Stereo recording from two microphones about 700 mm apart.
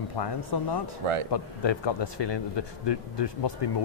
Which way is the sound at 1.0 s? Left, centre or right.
Right.